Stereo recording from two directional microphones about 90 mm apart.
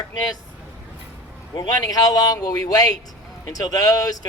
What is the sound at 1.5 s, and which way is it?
A man's voice, 50° left (ahead or behind).